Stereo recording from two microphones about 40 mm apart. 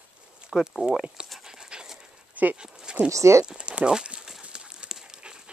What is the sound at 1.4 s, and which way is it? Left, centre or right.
Dog, centre.